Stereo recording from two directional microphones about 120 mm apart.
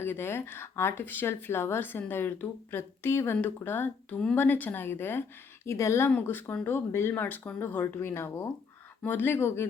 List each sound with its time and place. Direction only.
0.0 s speech: 20° left (ahead or behind)